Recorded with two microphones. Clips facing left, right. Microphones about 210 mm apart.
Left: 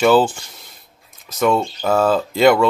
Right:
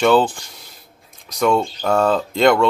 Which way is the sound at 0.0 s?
5° left (ahead or behind).